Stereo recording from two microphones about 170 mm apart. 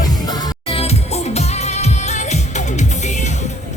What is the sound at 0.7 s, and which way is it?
Music, 35° left (ahead or behind).